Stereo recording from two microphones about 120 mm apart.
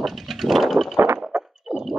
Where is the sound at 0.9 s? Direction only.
20° right (ahead or behind).